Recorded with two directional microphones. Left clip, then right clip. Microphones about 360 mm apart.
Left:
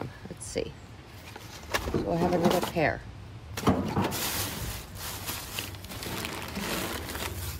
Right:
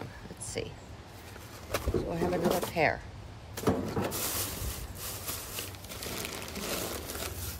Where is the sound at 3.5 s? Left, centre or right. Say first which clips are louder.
Left 3 dB; left.